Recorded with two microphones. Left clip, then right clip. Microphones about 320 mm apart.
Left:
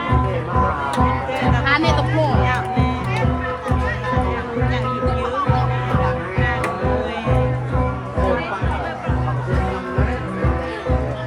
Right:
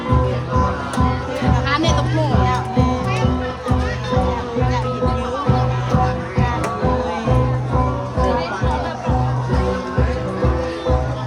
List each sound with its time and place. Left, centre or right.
1.6 s music: centre